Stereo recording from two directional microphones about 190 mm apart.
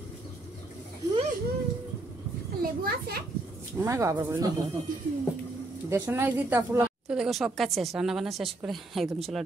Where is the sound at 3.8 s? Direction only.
15° right (ahead or behind).